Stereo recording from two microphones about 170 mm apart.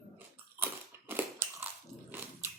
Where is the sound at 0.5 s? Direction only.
15° right (ahead or behind).